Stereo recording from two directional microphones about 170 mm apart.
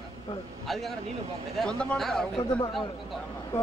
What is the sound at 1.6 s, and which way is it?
Speech, 5° left (ahead or behind).